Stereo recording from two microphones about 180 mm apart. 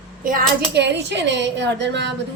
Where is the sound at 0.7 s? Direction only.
75° right (ahead or behind).